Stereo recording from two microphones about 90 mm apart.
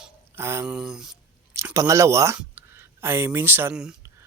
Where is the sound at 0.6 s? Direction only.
10° right (ahead or behind).